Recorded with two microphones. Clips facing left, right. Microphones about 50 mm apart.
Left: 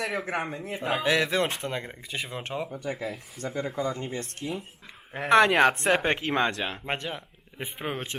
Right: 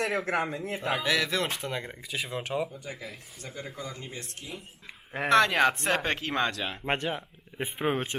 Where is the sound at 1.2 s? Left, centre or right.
Centre.